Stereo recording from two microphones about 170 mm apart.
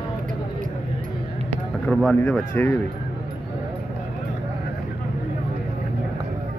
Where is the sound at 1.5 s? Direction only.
5° left (ahead or behind).